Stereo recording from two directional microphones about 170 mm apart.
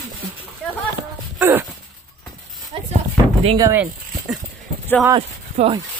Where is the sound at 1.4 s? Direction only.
15° right (ahead or behind).